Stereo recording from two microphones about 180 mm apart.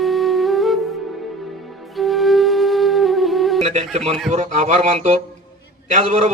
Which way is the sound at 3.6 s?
35° right (ahead or behind).